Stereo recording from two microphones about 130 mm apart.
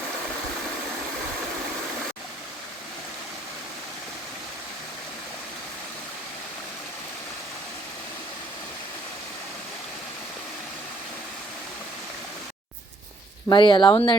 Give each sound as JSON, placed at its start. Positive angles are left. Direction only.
{"t": 13.5, "sound": "speech", "side_deg": 35}